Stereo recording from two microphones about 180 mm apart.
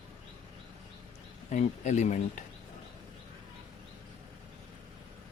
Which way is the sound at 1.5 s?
40° left (ahead or behind).